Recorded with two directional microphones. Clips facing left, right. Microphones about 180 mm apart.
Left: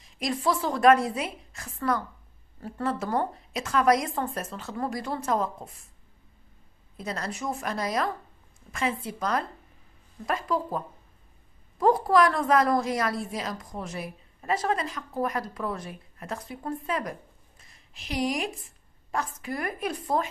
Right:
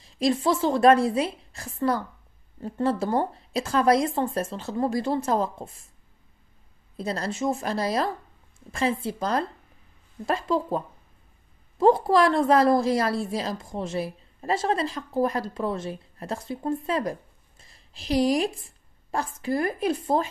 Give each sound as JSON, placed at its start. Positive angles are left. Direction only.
{"t": 0.0, "sound": "a woman's voice", "side_deg": -30}
{"t": 7.0, "sound": "a woman's voice", "side_deg": -30}
{"t": 11.8, "sound": "a woman's voice", "side_deg": -25}